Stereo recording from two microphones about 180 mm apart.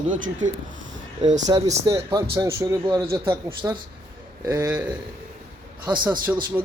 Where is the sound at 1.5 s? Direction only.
25° right (ahead or behind).